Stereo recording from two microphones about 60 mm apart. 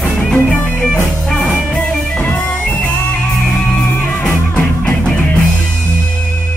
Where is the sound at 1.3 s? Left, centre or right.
Centre.